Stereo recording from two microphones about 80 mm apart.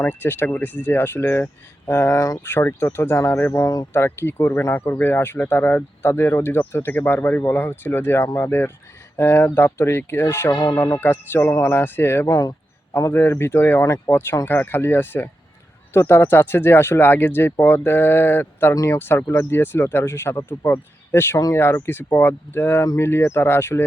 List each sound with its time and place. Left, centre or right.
0.0 s speech: left
3.5 s speech: left
3.9 s speech: left
12.3 s speech: left
13.1 s speech: left
18.7 s speech: left
18.9 s speech: left